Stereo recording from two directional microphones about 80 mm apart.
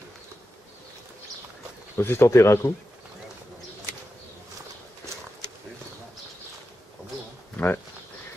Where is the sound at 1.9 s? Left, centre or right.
Left.